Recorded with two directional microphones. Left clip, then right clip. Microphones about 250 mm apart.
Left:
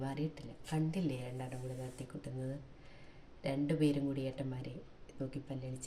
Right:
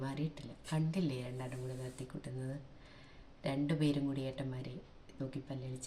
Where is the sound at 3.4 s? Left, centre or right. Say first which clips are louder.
Left 2 dB; centre.